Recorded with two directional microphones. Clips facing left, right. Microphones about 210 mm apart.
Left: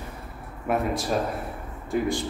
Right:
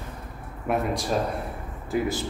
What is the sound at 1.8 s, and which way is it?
Speech, 5° right (ahead or behind).